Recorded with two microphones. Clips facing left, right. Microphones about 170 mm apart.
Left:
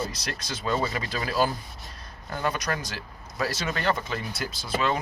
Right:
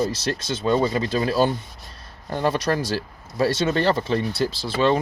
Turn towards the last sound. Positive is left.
turn(degrees=-30)  # may be behind; listen again after turning